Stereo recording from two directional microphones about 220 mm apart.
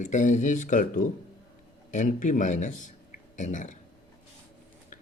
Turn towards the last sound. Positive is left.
turn(degrees=35)  # may be behind; listen again after turning